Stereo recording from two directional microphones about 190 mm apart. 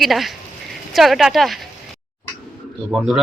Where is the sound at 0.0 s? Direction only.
Centre (ahead or behind).